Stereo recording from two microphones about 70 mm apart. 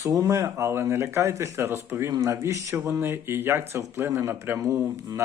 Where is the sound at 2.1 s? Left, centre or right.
Right.